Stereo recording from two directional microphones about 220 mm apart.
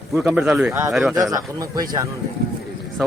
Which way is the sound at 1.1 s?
15° right (ahead or behind).